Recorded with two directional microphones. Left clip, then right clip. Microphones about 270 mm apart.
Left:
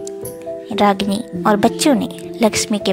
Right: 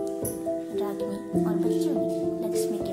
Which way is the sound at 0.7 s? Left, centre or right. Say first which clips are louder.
Left 14 dB; right.